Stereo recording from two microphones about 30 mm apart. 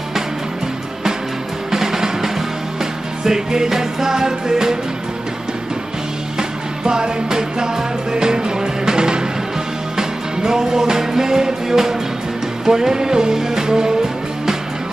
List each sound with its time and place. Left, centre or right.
1.7 s music: centre
6.3 s music: right